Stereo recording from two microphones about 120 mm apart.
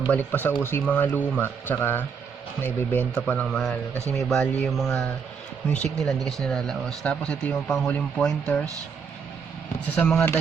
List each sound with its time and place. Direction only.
0.1 s speech: 15° left (ahead or behind)
9.9 s speech: 10° left (ahead or behind)